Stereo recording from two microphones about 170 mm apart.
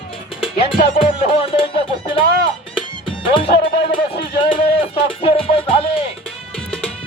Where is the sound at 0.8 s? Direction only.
35° left (ahead or behind).